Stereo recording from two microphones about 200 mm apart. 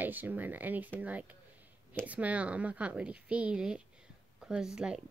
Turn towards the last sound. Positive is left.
turn(degrees=-5)  # may be behind; listen again after turning